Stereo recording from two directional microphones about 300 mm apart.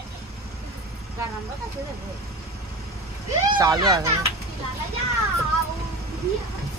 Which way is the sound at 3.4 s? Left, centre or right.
Centre.